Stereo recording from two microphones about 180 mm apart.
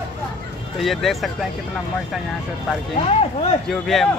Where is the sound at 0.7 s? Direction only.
Centre (ahead or behind).